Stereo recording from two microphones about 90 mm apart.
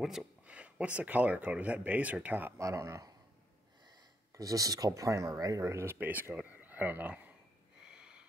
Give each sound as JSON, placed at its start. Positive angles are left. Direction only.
{"t": 0.5, "sound": "speech", "side_deg": -15}
{"t": 2.6, "sound": "speech", "side_deg": -35}
{"t": 4.4, "sound": "speech", "side_deg": -40}
{"t": 5.9, "sound": "speech", "side_deg": -20}
{"t": 7.8, "sound": "a sound", "side_deg": -10}